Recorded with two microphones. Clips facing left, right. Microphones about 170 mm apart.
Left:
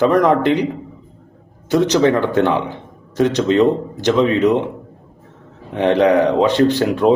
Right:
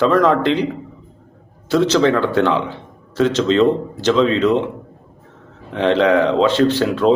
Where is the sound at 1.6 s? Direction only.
15° left (ahead or behind).